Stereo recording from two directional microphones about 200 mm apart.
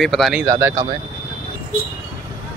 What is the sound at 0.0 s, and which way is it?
Speech, centre (ahead or behind).